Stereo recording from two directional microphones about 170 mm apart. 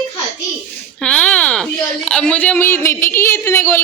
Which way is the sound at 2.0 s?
5° left (ahead or behind).